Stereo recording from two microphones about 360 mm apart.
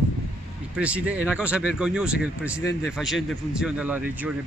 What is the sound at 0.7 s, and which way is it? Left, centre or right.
Speech, centre.